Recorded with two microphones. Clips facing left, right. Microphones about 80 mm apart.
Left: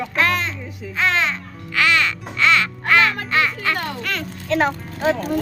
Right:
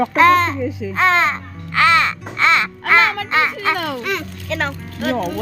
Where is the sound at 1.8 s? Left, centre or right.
Right.